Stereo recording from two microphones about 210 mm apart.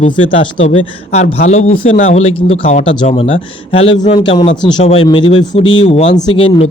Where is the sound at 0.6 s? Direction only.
30° left (ahead or behind).